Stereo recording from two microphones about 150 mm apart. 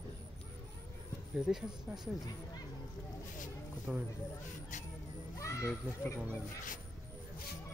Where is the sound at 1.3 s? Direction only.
5° right (ahead or behind).